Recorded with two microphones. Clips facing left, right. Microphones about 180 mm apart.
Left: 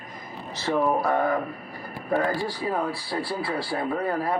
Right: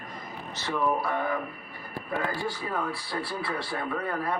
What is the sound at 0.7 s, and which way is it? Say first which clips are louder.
Speech: left 5 dB; 45° left (ahead or behind).